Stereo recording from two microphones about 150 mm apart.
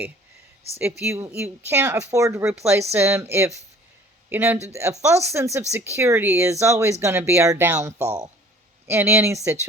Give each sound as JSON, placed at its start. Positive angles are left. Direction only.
{"t": 0.8, "sound": "a woman's voice", "side_deg": -15}